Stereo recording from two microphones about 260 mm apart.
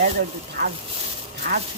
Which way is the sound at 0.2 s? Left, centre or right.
Right.